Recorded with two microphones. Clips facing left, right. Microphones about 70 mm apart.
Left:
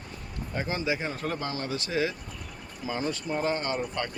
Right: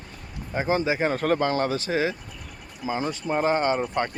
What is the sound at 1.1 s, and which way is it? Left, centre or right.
Speech, right.